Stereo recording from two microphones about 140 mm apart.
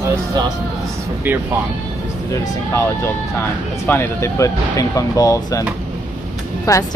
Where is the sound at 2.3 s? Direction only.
20° left (ahead or behind).